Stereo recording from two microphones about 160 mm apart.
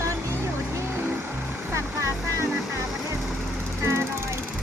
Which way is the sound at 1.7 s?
15° right (ahead or behind).